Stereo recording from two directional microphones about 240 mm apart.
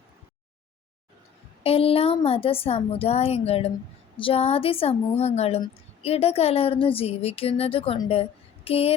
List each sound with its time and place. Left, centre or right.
1.6 s a woman's voice: left